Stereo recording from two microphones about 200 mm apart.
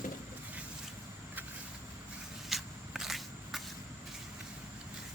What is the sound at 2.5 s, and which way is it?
Walk, centre (ahead or behind).